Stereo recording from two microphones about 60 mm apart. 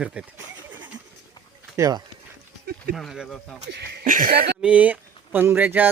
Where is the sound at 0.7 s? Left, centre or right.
Right.